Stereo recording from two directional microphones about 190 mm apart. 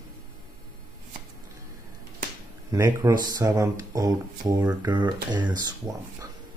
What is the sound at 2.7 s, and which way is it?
Speech, 15° right (ahead or behind).